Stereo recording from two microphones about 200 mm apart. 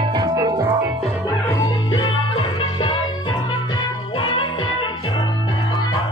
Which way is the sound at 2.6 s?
25° left (ahead or behind).